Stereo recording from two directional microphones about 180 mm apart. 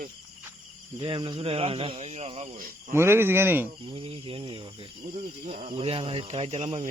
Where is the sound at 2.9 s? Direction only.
15° right (ahead or behind).